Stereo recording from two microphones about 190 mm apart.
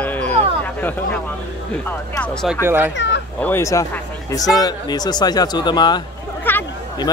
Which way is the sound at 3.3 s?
10° left (ahead or behind).